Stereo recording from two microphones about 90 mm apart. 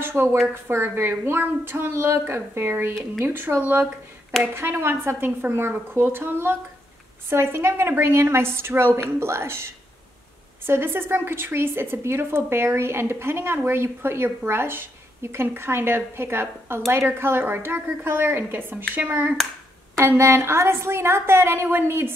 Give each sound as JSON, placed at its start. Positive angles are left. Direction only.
{"t": 0.0, "sound": "a woman's voice", "side_deg": -25}
{"t": 10.7, "sound": "a woman's voice", "side_deg": -25}
{"t": 20.0, "sound": "a woman's voice", "side_deg": -30}